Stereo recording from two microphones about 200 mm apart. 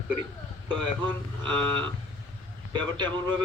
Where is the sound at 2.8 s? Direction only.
25° right (ahead or behind).